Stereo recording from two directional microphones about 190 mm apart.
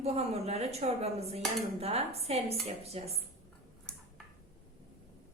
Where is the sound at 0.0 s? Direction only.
35° right (ahead or behind).